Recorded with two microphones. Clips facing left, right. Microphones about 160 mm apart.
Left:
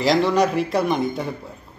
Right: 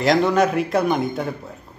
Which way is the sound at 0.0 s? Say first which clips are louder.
Right 1 dB; centre (ahead or behind).